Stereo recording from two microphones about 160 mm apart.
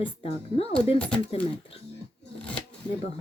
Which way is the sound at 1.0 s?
10° left (ahead or behind).